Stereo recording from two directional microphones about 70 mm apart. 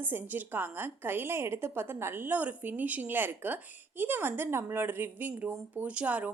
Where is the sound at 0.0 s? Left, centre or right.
Right.